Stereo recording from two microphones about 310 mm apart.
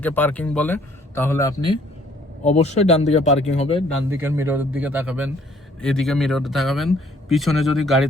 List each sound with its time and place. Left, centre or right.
0.0 s speech: centre
4.1 s speech: centre